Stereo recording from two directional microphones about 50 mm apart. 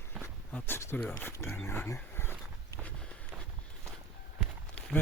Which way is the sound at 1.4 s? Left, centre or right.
Left.